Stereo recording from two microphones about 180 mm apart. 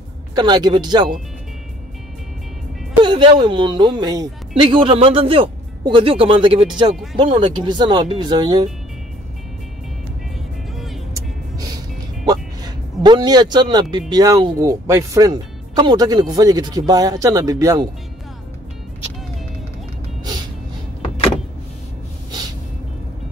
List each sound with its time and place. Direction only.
0.3 s speech: 25° right (ahead or behind)
3.0 s speech: 25° right (ahead or behind)
12.3 s speech: 25° right (ahead or behind)